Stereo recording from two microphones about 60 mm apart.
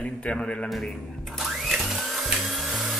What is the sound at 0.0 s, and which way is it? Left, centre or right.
Speech, left.